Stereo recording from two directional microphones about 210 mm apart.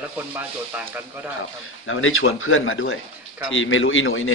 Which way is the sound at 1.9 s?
70° left (ahead or behind).